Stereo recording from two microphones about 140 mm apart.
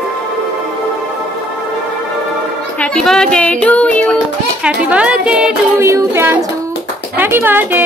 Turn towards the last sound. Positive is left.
turn(degrees=-15)  # may be behind; listen again after turning